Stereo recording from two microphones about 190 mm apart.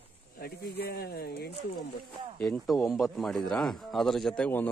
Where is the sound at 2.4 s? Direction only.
Centre (ahead or behind).